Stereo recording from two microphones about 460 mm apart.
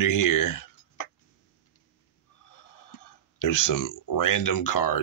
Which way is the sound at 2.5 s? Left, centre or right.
Left.